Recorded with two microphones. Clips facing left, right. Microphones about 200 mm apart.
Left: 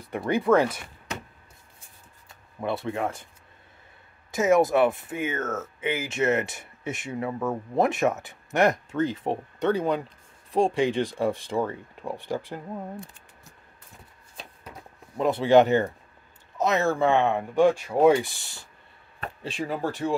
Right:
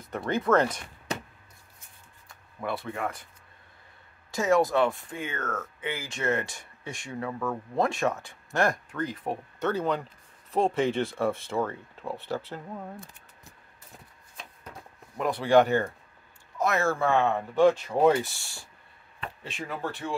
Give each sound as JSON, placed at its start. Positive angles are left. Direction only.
{"t": 0.3, "sound": "speech", "side_deg": 10}
{"t": 2.2, "sound": "speech", "side_deg": 25}
{"t": 4.3, "sound": "speech", "side_deg": 20}
{"t": 15.1, "sound": "speech", "side_deg": 25}
{"t": 19.1, "sound": "speech", "side_deg": 40}